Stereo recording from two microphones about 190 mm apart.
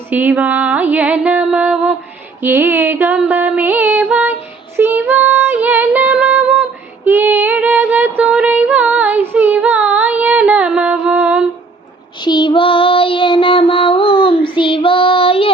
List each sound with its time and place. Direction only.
0.1 s music: 10° right (ahead or behind)
4.8 s female singing: 10° right (ahead or behind)
12.2 s child singing: 25° left (ahead or behind)